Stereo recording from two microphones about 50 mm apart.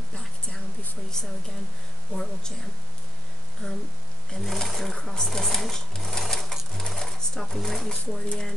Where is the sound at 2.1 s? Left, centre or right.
Centre.